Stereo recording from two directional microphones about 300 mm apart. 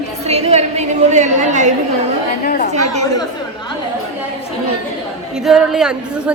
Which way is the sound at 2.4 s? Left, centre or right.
Left.